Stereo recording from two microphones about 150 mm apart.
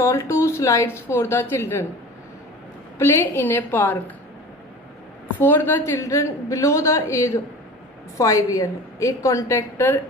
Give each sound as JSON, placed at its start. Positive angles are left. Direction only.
{"t": 0.0, "sound": "a woman's voice", "side_deg": 20}
{"t": 3.0, "sound": "a woman's voice", "side_deg": 15}
{"t": 5.4, "sound": "a woman's voice", "side_deg": 15}